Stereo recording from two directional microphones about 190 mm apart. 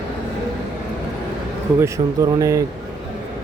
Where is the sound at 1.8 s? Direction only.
15° right (ahead or behind).